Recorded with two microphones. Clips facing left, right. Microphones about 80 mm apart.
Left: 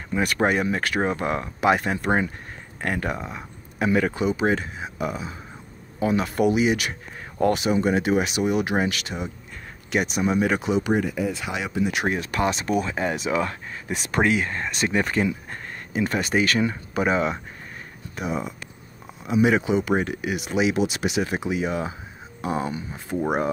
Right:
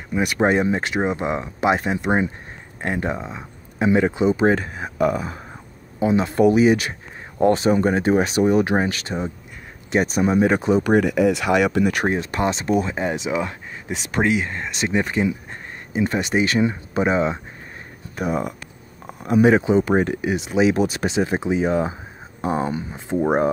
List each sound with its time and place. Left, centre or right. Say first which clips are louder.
0.1 s speech: right 3 dB; centre; by 5.4 s right
5.9 s speech: right 4 dB; right
10.9 s speech: right 7 dB; right
12.1 s speech: right 2 dB; right
18.1 s speech: right 5 dB; right